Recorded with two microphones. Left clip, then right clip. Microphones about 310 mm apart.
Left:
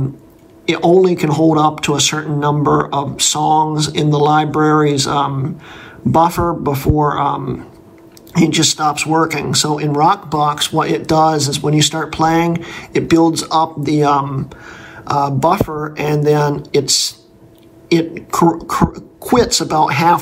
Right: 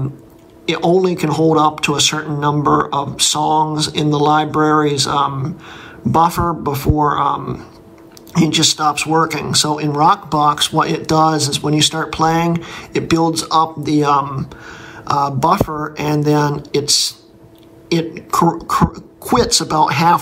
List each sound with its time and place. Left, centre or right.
0.7 s speech: centre